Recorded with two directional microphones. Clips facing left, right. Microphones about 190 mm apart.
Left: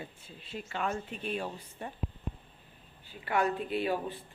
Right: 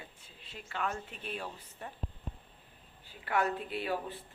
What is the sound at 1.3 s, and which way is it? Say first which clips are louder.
Speech: left 5 dB; 15° left (ahead or behind).